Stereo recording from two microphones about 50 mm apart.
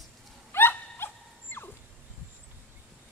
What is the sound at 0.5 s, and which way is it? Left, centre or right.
Dog, left.